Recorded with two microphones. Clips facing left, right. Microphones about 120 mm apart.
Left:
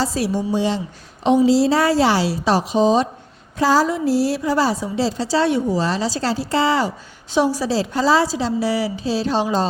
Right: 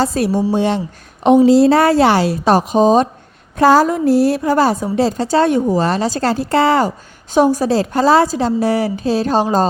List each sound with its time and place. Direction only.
0.0 s a woman's voice: 55° right (ahead or behind)